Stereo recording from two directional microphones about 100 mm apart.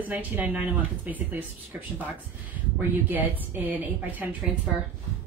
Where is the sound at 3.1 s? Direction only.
15° right (ahead or behind).